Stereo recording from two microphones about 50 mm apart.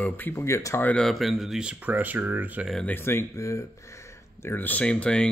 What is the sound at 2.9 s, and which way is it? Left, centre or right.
Speech, left.